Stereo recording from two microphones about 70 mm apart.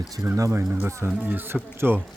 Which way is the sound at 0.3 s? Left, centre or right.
Right.